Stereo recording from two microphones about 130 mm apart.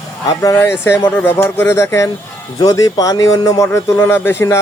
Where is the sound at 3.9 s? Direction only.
15° left (ahead or behind).